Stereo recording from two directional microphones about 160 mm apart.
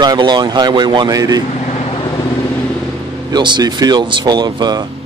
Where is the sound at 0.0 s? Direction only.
25° right (ahead or behind).